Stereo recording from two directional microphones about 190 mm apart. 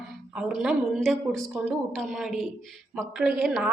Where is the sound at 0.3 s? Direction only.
5° right (ahead or behind).